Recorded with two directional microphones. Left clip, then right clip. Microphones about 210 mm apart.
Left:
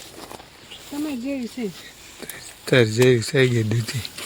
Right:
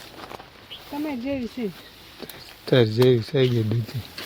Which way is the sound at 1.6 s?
15° left (ahead or behind).